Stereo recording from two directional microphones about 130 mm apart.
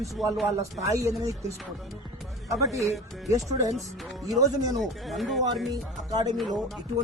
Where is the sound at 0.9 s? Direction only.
25° right (ahead or behind).